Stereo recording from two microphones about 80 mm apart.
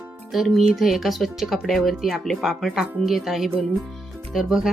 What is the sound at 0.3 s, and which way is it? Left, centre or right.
Speech, centre.